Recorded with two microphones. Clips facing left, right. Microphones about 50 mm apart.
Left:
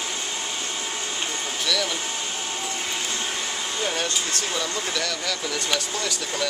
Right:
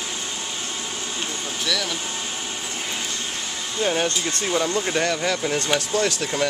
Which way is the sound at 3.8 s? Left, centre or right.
Right.